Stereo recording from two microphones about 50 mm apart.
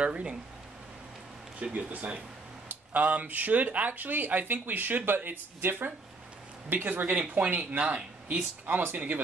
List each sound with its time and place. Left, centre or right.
0.0 s speech: right
1.6 s speech: right
2.7 s speech: right